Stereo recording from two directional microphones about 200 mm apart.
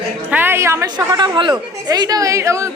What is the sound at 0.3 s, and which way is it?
A woman's voice, 10° right (ahead or behind).